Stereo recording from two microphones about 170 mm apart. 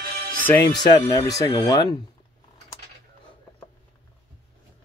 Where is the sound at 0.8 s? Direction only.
25° left (ahead or behind).